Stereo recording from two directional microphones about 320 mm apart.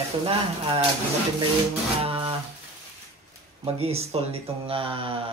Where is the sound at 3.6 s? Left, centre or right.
Centre.